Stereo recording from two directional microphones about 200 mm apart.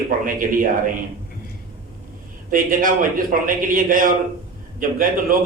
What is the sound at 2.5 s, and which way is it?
A man's voice, 45° right (ahead or behind).